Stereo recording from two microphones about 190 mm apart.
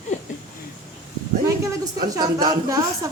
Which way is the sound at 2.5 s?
20° right (ahead or behind).